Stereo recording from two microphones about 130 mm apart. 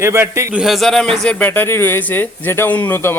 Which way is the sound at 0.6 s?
Centre (ahead or behind).